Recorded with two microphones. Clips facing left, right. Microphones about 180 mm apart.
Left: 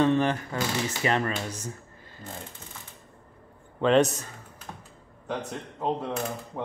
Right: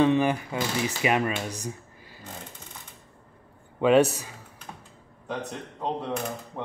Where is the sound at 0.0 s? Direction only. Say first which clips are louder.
Right 1 dB; 10° right (ahead or behind).